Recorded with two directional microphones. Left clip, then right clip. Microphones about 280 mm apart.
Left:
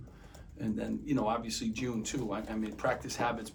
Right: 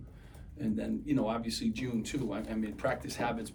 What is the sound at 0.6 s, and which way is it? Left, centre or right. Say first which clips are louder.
Speech: right 1 dB; centre.